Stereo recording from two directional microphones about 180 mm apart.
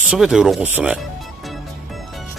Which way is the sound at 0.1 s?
5° right (ahead or behind).